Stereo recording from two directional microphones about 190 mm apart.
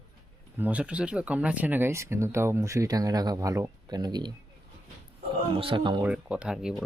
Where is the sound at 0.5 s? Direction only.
10° right (ahead or behind).